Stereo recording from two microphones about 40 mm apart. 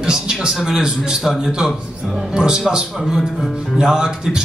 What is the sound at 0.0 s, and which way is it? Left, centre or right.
Speech, centre.